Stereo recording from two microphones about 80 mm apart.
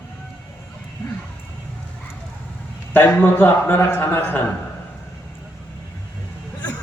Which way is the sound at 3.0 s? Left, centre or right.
Left.